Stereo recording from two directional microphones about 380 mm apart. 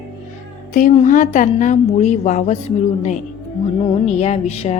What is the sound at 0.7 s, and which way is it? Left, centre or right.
A woman's voice, centre.